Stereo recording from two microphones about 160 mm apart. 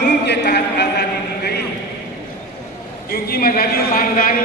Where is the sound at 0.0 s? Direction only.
90° left.